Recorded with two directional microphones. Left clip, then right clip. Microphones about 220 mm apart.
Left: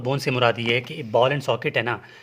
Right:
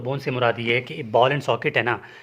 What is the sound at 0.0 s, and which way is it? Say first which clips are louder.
Speech: left 2 dB; 40° left (ahead or behind).